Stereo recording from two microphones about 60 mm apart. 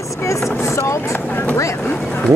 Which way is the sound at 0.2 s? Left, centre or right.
Left.